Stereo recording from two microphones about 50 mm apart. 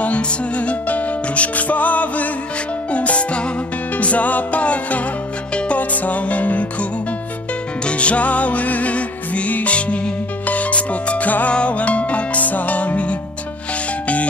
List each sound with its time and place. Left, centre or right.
0.0 s music: left
5.8 s music: left